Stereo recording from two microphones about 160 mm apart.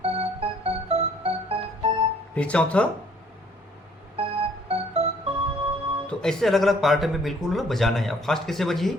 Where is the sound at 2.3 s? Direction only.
5° left (ahead or behind).